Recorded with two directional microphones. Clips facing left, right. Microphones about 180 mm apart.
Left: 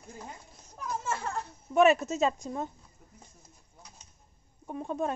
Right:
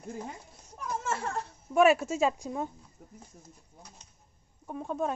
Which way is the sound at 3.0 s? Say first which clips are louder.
Right 8 dB; 45° right (ahead or behind).